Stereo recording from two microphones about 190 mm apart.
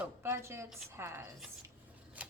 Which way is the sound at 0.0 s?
15° right (ahead or behind).